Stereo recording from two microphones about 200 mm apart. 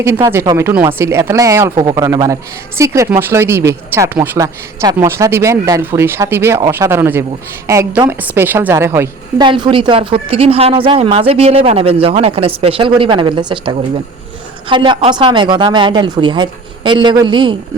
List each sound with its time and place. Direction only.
0.0 s speech: 15° right (ahead or behind)
9.5 s speech: 25° right (ahead or behind)